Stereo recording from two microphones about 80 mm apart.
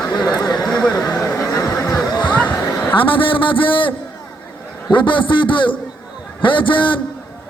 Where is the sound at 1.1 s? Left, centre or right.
Left.